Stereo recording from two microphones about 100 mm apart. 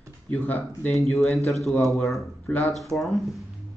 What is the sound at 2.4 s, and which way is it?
Speech, 15° left (ahead or behind).